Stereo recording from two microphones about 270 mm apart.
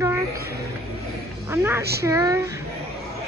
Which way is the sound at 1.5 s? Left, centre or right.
Centre.